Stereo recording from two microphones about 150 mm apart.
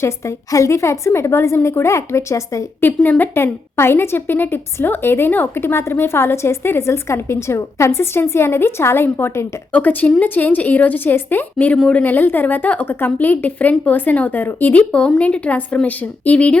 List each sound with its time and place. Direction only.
0.0 s a woman's voice: 20° left (ahead or behind)